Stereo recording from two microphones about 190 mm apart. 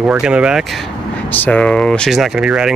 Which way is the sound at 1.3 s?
10° left (ahead or behind).